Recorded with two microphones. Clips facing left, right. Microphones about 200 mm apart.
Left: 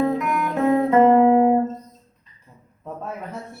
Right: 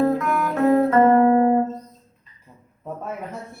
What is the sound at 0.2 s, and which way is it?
Music, 15° left (ahead or behind).